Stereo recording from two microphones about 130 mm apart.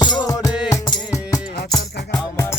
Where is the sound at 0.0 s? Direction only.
35° left (ahead or behind).